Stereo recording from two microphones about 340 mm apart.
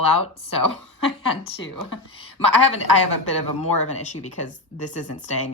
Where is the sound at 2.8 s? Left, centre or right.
Left.